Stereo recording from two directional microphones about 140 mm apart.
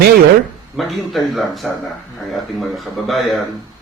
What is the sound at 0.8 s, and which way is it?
A man's voice, centre (ahead or behind).